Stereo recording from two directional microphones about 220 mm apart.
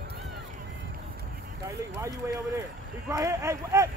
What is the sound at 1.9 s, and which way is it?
Speech, 15° right (ahead or behind).